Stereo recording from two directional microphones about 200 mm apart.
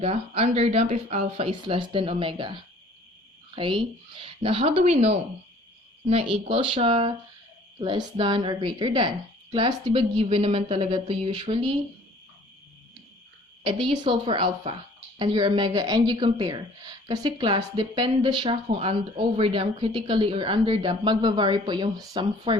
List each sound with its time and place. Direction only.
0.0 s a woman's voice: 30° right (ahead or behind)
6.5 s a woman's voice: 25° right (ahead or behind)
13.7 s a woman's voice: 25° right (ahead or behind)